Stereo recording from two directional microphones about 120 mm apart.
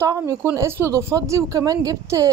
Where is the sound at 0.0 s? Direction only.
25° right (ahead or behind).